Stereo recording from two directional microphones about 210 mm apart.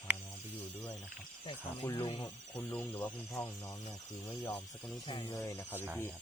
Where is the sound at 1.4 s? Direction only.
20° left (ahead or behind).